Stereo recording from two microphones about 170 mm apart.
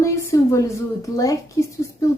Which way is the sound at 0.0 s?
15° left (ahead or behind).